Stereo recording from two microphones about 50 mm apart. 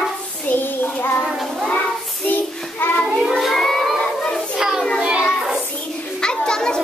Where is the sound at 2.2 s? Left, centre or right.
Left.